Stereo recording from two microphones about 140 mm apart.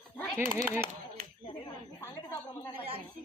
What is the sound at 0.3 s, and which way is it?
Speech, 15° right (ahead or behind).